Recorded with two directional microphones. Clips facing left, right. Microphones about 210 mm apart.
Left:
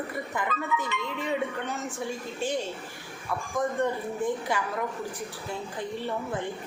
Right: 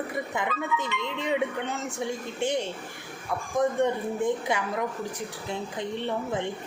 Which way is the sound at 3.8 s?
20° right (ahead or behind).